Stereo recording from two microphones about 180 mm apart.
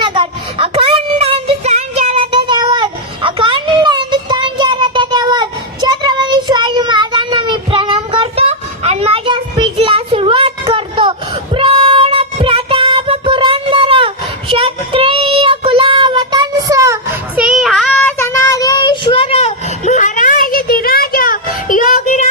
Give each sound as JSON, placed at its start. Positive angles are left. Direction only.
{"t": 0.0, "sound": "a sound", "side_deg": -30}
{"t": 11.5, "sound": "child singing", "side_deg": -30}
{"t": 17.3, "sound": "child singing", "side_deg": -5}